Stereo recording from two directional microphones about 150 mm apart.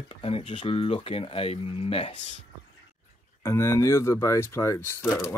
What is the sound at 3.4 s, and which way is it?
Speech, 20° left (ahead or behind).